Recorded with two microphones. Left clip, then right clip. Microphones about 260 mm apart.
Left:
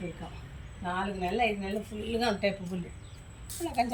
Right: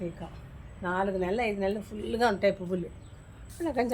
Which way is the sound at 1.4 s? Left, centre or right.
Centre.